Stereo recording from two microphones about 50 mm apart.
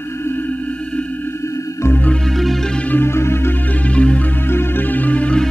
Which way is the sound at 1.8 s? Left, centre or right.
Left.